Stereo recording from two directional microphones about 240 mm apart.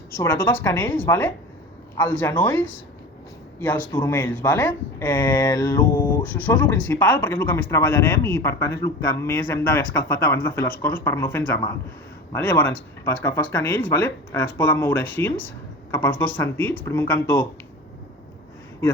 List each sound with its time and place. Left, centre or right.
0.1 s speech: centre
6.2 s speech: centre